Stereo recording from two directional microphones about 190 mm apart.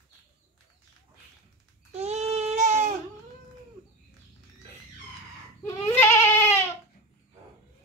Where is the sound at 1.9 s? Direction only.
35° right (ahead or behind).